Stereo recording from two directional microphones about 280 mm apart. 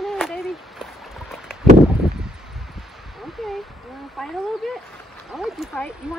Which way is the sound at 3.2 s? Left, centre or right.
Centre.